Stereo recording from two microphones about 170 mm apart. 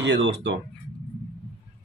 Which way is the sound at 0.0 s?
90° right.